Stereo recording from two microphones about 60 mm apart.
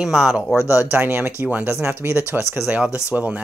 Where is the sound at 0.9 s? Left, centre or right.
Right.